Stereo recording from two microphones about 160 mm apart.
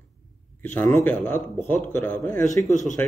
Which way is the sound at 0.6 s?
10° left (ahead or behind).